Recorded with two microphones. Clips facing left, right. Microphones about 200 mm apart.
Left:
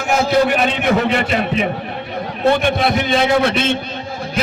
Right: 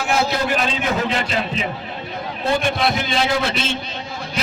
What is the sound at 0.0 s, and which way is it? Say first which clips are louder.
A man's voice: left 5 dB; 50° left (ahead or behind).